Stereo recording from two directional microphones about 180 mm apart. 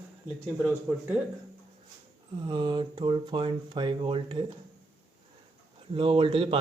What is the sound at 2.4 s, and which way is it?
Speech, 25° right (ahead or behind).